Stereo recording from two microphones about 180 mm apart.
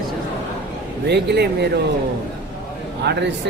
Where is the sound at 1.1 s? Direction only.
70° right (ahead or behind).